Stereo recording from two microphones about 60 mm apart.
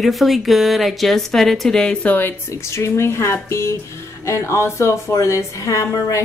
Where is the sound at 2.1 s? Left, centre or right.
Left.